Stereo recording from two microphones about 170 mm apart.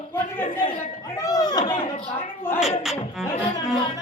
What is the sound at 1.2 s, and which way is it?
Chatter, 20° left (ahead or behind).